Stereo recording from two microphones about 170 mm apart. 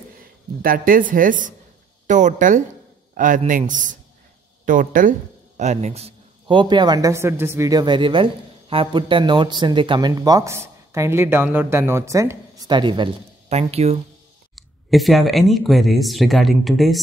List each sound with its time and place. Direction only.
0.6 s a woman's voice: 55° right (ahead or behind); by 13.9 s 40° right (ahead or behind)
14.5 s speech: centre (ahead or behind)